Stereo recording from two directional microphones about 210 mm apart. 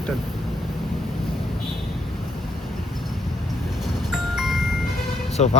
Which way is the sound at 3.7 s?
Centre (ahead or behind).